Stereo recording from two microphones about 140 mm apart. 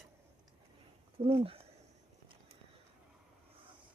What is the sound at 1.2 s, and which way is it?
Speech, 45° right (ahead or behind).